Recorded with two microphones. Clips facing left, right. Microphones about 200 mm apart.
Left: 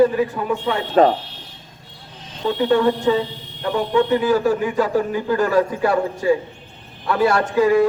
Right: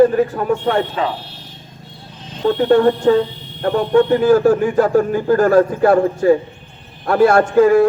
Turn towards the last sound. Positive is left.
turn(degrees=-50)  # may be behind; listen again after turning